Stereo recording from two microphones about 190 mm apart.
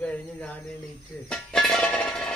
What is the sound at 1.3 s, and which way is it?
Music, 5° left (ahead or behind).